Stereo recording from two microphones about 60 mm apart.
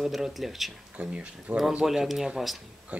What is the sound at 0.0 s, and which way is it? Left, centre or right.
Speech, centre.